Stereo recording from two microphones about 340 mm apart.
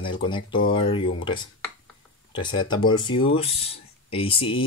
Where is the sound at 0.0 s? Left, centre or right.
Centre.